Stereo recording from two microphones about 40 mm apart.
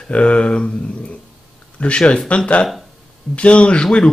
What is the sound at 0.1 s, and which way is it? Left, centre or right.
Speech, left.